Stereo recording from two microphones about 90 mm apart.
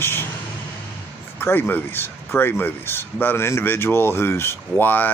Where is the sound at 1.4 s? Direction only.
25° left (ahead or behind).